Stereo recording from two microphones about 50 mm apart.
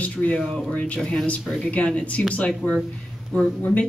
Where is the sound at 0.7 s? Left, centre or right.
Left.